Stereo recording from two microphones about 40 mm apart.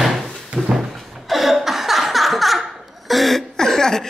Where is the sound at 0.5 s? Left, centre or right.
Right.